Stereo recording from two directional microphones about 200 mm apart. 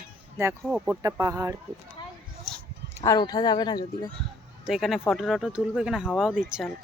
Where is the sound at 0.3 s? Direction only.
10° right (ahead or behind).